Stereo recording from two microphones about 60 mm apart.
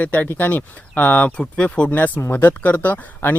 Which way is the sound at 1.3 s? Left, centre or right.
Centre.